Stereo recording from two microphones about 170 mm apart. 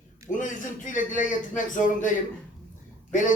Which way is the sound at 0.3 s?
50° left (ahead or behind).